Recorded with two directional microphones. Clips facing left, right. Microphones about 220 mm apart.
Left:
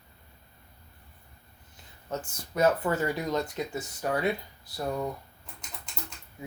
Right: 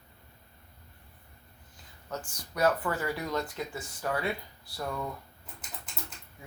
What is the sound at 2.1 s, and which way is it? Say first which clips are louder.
Speech: left 5 dB; 25° left (ahead or behind).